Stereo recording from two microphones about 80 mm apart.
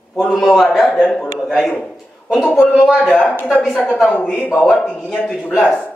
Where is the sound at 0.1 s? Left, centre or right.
Centre.